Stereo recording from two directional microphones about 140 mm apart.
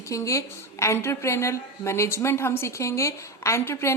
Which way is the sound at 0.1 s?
20° left (ahead or behind).